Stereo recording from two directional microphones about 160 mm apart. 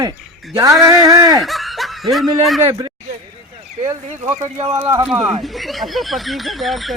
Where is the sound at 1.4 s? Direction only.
Centre (ahead or behind).